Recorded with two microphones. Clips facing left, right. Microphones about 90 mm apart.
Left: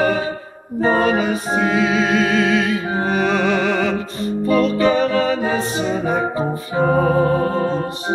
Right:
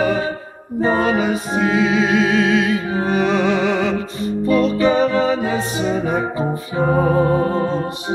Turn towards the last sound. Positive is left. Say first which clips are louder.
# even
turn(degrees=-5)  # may be behind; listen again after turning